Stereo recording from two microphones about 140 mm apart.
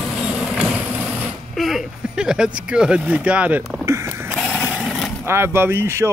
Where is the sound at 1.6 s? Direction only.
Centre (ahead or behind).